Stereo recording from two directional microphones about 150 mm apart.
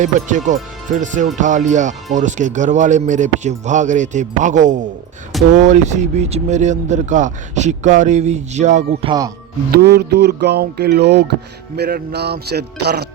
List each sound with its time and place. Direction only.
0.0 s a man's voice: 55° right (ahead or behind)
9.0 s music: 25° right (ahead or behind)
9.7 s speech: 90° right